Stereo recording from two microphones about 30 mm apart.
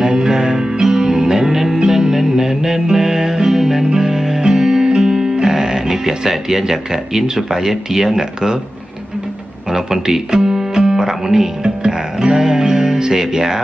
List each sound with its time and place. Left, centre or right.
0.0 s music: centre
9.7 s music: centre
11.8 s music: right